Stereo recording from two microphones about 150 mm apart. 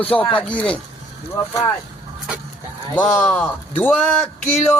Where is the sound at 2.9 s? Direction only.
5° left (ahead or behind).